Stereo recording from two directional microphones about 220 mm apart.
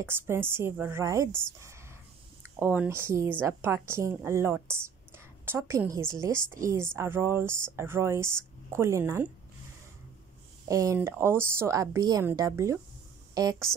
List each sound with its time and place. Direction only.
0.0 s a woman's voice: 10° right (ahead or behind)
2.6 s a woman's voice: 10° right (ahead or behind)
10.7 s a woman's voice: 15° right (ahead or behind)